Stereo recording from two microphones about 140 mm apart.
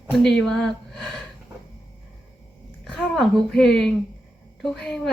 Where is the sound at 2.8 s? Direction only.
Centre (ahead or behind).